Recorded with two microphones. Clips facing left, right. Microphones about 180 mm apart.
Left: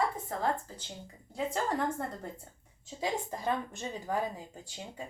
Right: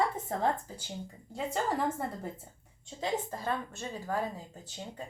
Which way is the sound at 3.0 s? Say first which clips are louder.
Right 1 dB; 15° left (ahead or behind).